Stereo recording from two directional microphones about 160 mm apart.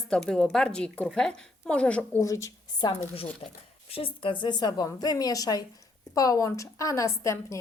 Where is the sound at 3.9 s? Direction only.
35° left (ahead or behind).